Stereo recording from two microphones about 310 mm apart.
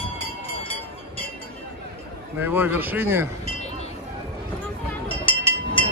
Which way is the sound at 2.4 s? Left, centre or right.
Centre.